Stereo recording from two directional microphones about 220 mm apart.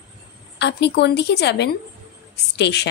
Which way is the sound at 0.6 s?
50° left (ahead or behind).